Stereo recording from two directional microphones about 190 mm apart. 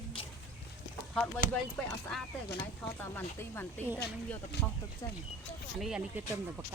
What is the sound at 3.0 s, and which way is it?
Speech, 10° left (ahead or behind).